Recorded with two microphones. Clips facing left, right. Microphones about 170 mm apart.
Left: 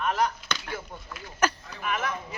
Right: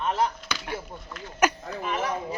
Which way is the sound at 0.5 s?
10° right (ahead or behind).